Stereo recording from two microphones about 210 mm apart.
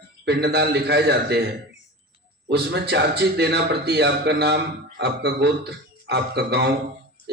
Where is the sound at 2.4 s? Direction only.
50° right (ahead or behind).